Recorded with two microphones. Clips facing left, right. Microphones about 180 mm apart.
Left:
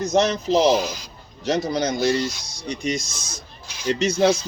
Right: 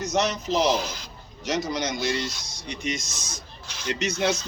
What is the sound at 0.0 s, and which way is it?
Speech, 30° left (ahead or behind).